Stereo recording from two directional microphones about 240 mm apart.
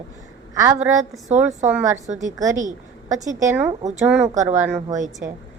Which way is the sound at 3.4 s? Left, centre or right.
Centre.